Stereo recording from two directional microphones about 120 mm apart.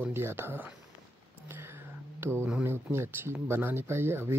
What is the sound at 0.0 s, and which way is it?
Speech, 20° right (ahead or behind).